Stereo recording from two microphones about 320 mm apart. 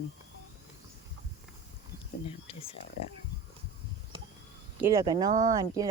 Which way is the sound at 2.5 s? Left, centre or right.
Centre.